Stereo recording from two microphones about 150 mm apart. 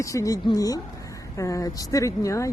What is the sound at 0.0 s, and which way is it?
Speech, 20° left (ahead or behind).